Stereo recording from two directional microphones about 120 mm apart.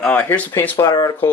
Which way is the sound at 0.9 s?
35° left (ahead or behind).